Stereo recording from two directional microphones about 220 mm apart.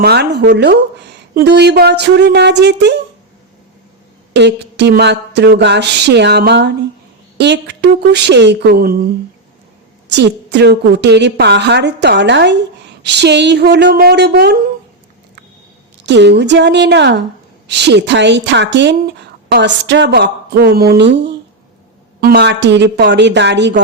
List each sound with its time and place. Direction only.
0.0 s a woman's voice: 50° right (ahead or behind)
4.4 s a woman's voice: 50° right (ahead or behind)
10.1 s a woman's voice: 50° right (ahead or behind)
16.0 s a woman's voice: 50° right (ahead or behind)